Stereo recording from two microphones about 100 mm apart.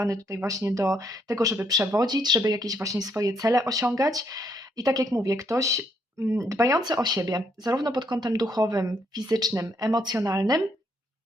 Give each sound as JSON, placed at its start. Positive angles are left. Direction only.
{"t": 0.0, "sound": "speech", "side_deg": -30}